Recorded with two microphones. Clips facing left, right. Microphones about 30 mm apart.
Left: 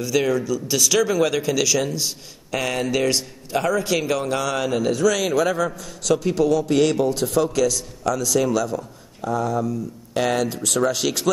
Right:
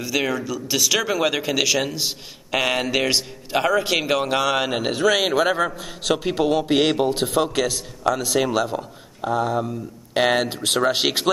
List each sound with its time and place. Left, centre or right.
0.0 s a man's voice: centre; by 11.2 s right